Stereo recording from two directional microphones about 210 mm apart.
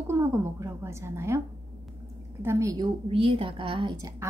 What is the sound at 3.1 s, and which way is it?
A woman's voice, 25° right (ahead or behind).